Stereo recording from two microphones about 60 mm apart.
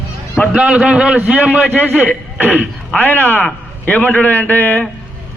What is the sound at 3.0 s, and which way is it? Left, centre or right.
A man's voice, left.